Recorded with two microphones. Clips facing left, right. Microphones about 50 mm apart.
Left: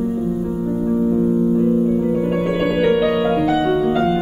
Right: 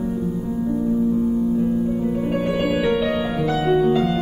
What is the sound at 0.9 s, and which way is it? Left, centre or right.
Music, left.